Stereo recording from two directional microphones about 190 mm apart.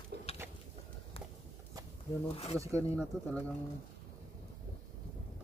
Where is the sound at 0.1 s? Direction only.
60° right (ahead or behind).